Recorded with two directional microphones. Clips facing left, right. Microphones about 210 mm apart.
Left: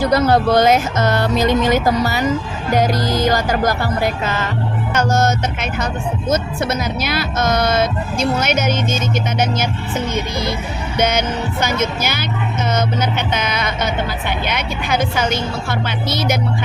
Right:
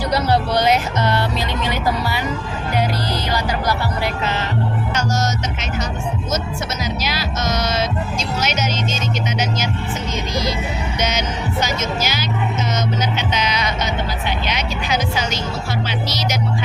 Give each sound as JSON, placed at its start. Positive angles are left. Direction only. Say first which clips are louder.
{"t": 0.0, "sound": "speech", "louder": "left 5 dB", "side_deg": 50}
{"t": 4.9, "sound": "music", "louder": "left 7 dB", "side_deg": 55}
{"t": 6.8, "sound": "music", "louder": "left 3 dB", "side_deg": 55}
{"t": 10.9, "sound": "music", "louder": "left 7 dB", "side_deg": 55}